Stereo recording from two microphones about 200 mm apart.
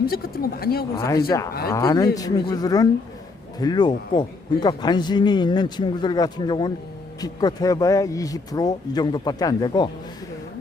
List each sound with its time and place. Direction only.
0.0 s speech: 50° left (ahead or behind)
0.9 s a man's voice: 15° left (ahead or behind)